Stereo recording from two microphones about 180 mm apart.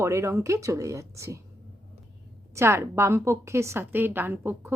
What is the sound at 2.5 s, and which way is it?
Speech, 15° right (ahead or behind).